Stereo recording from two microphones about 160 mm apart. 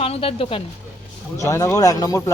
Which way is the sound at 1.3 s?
20° left (ahead or behind).